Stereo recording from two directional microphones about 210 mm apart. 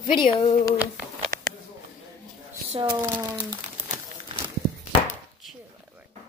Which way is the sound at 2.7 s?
20° right (ahead or behind).